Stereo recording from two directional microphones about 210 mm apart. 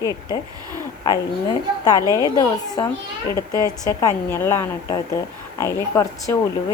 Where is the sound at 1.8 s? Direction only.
15° left (ahead or behind).